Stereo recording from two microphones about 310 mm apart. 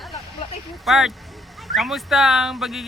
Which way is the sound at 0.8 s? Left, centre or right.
Centre.